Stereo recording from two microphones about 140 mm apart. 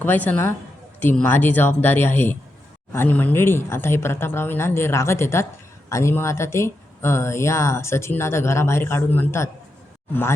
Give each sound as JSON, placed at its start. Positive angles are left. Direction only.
{"t": 0.0, "sound": "speech", "side_deg": 15}